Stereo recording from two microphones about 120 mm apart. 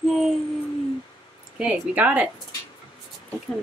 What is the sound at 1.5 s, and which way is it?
Speech, 10° right (ahead or behind).